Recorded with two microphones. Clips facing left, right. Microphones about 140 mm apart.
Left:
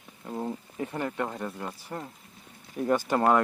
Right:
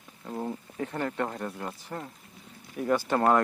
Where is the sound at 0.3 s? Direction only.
5° left (ahead or behind).